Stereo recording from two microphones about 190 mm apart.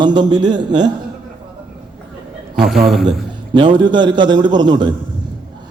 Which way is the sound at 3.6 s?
25° right (ahead or behind).